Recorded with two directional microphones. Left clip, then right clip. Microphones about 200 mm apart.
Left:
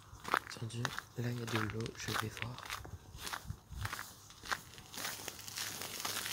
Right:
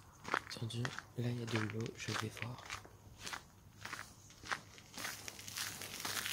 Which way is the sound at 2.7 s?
50° left (ahead or behind).